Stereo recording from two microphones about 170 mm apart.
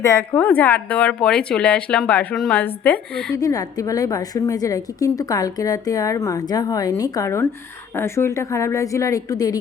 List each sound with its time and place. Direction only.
0.0 s speech: 15° left (ahead or behind)
3.3 s a woman's voice: 20° left (ahead or behind)